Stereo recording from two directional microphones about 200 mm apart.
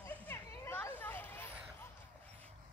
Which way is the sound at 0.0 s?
10° left (ahead or behind).